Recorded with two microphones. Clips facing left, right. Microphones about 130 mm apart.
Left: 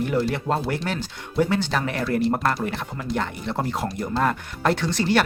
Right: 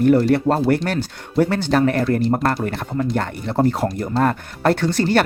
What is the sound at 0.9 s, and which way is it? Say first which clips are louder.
Speech: right 5 dB; 65° right (ahead or behind).